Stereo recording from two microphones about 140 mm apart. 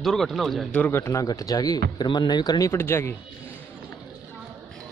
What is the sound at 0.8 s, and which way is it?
Speech, 15° left (ahead or behind).